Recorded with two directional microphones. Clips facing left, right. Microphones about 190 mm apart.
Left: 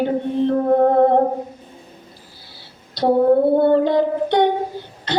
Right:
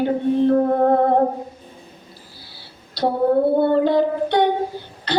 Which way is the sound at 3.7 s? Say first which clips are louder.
Left 1 dB; 20° left (ahead or behind).